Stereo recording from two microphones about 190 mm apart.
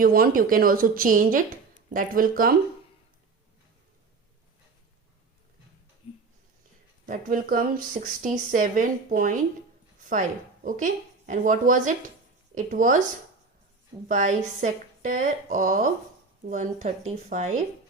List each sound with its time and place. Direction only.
0.0 s speech: 50° right (ahead or behind)
7.0 s speech: 45° right (ahead or behind)
14.1 s a woman's voice: 40° right (ahead or behind)